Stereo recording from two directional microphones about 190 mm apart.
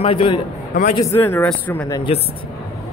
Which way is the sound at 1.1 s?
10° left (ahead or behind).